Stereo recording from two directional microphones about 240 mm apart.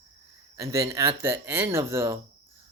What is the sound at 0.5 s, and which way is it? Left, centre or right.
Speech, centre.